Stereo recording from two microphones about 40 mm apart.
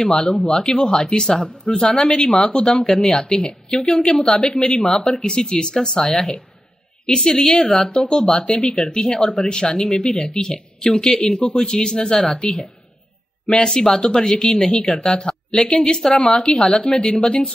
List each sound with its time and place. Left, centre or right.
0.0 s speech: centre
0.8 s a woman's voice: centre
7.9 s speech: centre
13.5 s speech: centre